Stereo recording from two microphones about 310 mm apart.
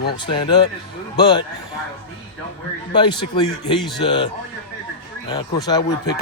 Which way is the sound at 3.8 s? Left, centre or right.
Centre.